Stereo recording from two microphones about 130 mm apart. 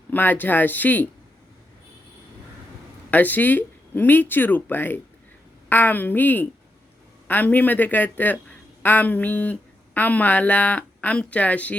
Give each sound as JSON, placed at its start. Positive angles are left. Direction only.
{"t": 0.1, "sound": "speech", "side_deg": 15}
{"t": 3.1, "sound": "speech", "side_deg": 15}